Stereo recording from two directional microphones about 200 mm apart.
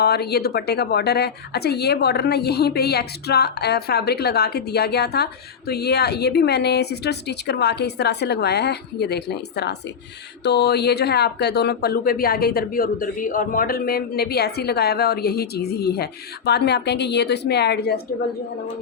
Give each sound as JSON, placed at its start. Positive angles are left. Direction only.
{"t": 0.0, "sound": "a woman's voice", "side_deg": 55}